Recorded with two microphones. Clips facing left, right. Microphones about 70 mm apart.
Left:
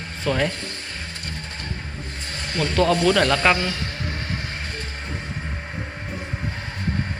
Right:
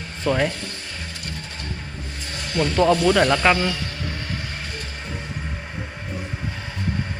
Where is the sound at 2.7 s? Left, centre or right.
Centre.